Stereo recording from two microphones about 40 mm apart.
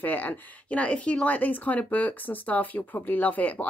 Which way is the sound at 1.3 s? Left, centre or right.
Left.